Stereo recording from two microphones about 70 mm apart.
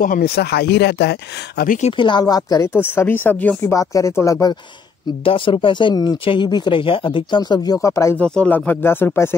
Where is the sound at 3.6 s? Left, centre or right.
Left.